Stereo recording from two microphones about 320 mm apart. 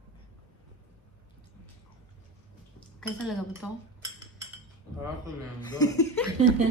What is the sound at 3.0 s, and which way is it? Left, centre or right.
Speech, centre.